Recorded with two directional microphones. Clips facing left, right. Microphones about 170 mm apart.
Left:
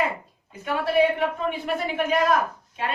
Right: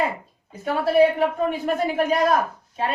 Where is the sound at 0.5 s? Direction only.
35° right (ahead or behind).